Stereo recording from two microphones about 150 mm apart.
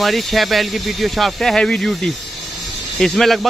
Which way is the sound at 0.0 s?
Centre (ahead or behind).